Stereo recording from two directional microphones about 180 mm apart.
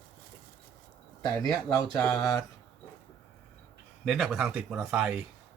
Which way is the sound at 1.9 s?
5° left (ahead or behind).